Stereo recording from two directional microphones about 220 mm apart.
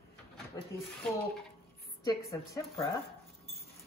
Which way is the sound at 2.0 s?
15° left (ahead or behind).